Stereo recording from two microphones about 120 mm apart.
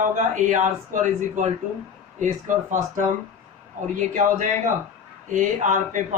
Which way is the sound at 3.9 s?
90° right.